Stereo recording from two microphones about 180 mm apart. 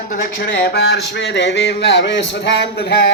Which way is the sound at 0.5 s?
80° left.